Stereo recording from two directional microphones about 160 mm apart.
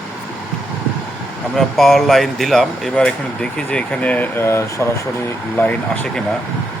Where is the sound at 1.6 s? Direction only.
Centre (ahead or behind).